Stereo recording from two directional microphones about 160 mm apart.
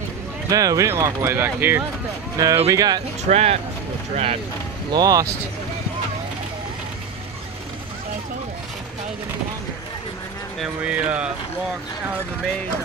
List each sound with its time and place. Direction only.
0.5 s speech: 20° right (ahead or behind)
3.3 s speech: 40° right (ahead or behind)
4.9 s speech: 20° right (ahead or behind)
10.6 s speech: 5° right (ahead or behind)